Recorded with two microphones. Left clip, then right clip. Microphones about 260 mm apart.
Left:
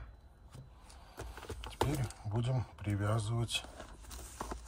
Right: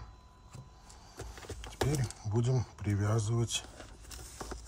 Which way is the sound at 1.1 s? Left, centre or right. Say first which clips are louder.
Even; left.